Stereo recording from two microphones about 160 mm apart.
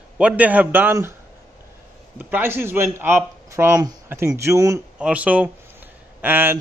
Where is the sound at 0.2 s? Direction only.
10° right (ahead or behind).